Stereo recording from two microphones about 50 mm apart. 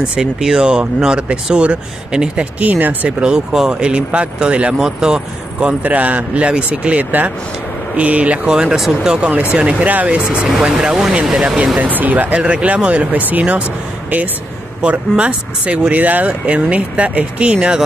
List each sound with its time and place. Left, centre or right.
0.2 s speech: centre
2.6 s speech: right
3.1 s speech: centre
4.7 s speech: centre
5.7 s speech: right
8.5 s speech: centre
9.6 s speech: right
10.5 s speech: centre
11.8 s speech: right
14.8 s speech: right